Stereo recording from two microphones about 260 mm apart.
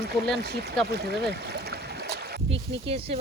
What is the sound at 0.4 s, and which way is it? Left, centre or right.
Speech, right.